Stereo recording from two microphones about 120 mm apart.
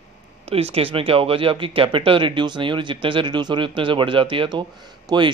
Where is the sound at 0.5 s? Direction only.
55° right (ahead or behind).